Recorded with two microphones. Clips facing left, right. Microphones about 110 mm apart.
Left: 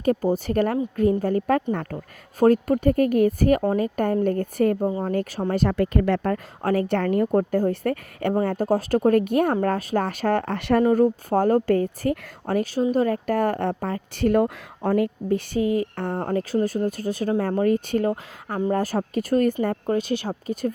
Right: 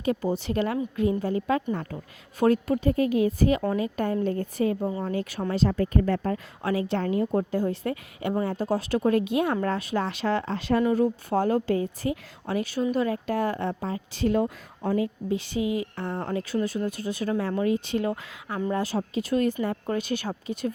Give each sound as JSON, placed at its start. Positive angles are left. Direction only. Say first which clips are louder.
{"t": 0.0, "sound": "a woman's voice", "louder": "left 5 dB", "side_deg": 45}
{"t": 2.4, "sound": "a woman's voice", "louder": "left 4 dB", "side_deg": 45}
{"t": 3.6, "sound": "a woman's voice", "louder": "left 4 dB", "side_deg": 40}
{"t": 5.5, "sound": "speech", "louder": "left 2 dB", "side_deg": 60}
{"t": 6.6, "sound": "a woman's voice", "louder": "left 5 dB", "side_deg": 50}
{"t": 10.8, "sound": "a woman's voice", "louder": "left 5 dB", "side_deg": 40}
{"t": 19.6, "sound": "speech", "louder": "left 4 dB", "side_deg": 35}